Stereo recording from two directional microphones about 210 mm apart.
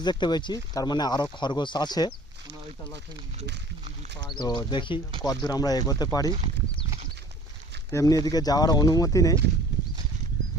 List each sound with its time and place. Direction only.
0.0 s speech: 20° left (ahead or behind)
4.4 s speech: 20° left (ahead or behind)
7.9 s speech: 15° left (ahead or behind)